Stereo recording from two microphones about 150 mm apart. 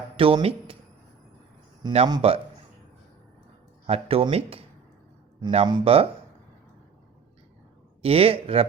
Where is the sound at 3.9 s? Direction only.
40° right (ahead or behind).